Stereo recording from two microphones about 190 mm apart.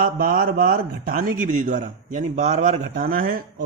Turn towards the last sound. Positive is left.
turn(degrees=-50)  # may be behind; listen again after turning